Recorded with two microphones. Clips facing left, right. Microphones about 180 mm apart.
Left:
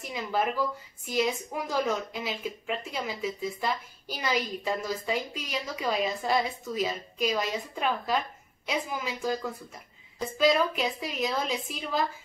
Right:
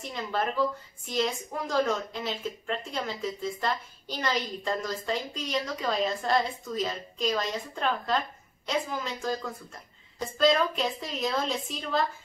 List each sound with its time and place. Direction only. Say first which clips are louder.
0.0 s a woman's voice: left 1 dB; 5° left (ahead or behind)